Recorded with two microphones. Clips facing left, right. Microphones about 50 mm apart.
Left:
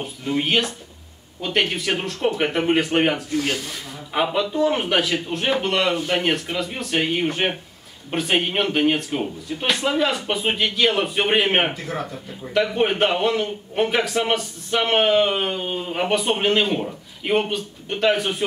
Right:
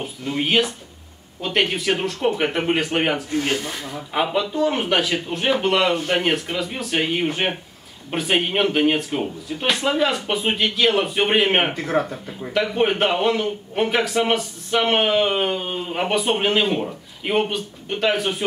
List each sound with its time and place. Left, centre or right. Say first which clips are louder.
0.0 s a man's voice: left 1 dB; centre
3.3 s speech: right 1 dB; right
4.1 s a man's voice: even; centre
11.7 s speech: right 7 dB; right
12.5 s a man's voice: even; centre